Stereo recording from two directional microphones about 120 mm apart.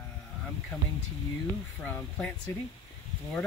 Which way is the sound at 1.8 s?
10° left (ahead or behind).